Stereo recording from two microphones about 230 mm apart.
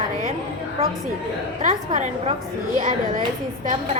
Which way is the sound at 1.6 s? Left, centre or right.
Right.